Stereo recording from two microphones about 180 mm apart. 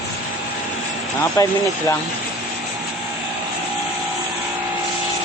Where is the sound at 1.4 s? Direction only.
15° left (ahead or behind).